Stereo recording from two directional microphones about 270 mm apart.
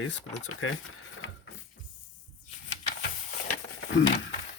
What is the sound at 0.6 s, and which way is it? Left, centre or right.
Speech, left.